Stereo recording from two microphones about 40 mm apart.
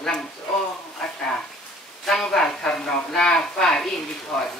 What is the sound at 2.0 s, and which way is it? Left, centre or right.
Speech, centre.